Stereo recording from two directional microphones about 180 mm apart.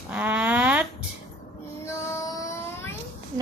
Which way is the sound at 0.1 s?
10° right (ahead or behind).